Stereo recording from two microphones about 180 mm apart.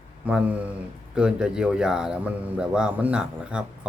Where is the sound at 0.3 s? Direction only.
5° right (ahead or behind).